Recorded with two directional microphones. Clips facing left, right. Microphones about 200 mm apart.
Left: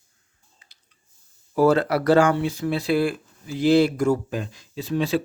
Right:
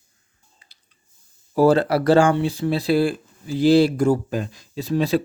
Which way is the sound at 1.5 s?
30° right (ahead or behind).